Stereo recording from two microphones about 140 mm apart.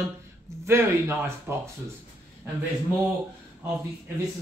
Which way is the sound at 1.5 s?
15° right (ahead or behind).